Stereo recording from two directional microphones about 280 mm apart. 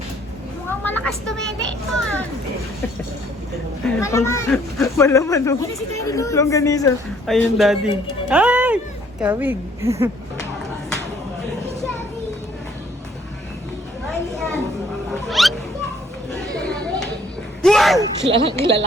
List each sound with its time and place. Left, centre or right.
0.7 s a child's voice: centre
3.8 s speech: centre
7.3 s speech: centre
8.3 s music: centre
9.2 s a woman's voice: centre
14.1 s a sound: centre
15.3 s music: centre
16.6 s chatter: centre
17.6 s a sound: centre
18.0 s speech: centre